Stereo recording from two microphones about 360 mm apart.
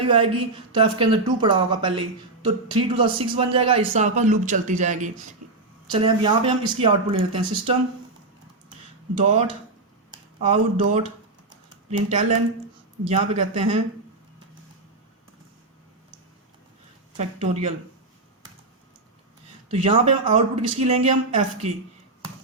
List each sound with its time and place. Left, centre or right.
0.7 s speech: centre
5.4 s a sound: right
5.9 s speech: centre
9.1 s speech: centre
10.1 s a sound: centre
11.4 s typing: centre
13.1 s speech: centre
17.2 s speech: centre
19.7 s speech: centre